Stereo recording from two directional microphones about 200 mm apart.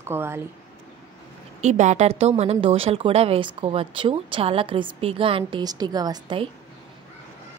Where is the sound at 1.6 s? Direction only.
35° right (ahead or behind).